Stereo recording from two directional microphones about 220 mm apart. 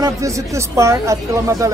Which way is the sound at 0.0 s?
15° right (ahead or behind).